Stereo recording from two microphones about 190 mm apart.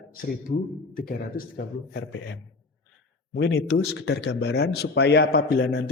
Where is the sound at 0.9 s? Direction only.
50° left (ahead or behind).